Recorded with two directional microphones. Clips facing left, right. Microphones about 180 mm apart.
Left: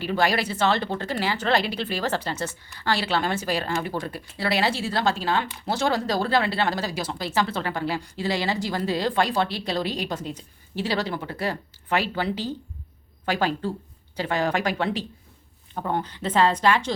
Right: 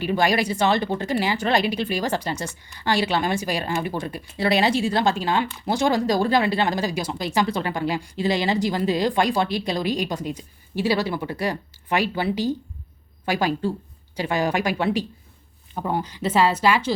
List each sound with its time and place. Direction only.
0.0 s a woman's voice: 15° right (ahead or behind)